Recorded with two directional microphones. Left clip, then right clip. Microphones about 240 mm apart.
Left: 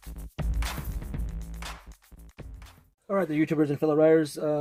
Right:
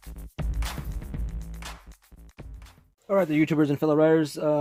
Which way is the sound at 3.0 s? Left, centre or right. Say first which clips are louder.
Right 4 dB; right.